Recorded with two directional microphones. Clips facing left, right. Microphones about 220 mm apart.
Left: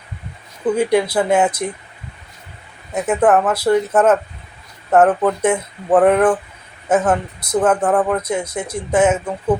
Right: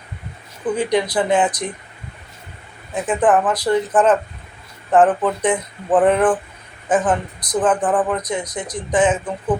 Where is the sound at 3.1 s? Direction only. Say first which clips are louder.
Left 2 dB; 10° left (ahead or behind).